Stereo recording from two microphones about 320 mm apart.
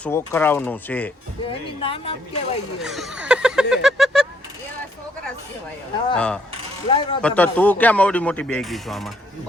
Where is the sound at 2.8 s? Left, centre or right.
Centre.